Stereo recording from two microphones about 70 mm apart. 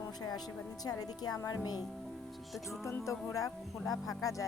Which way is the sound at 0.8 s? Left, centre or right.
Left.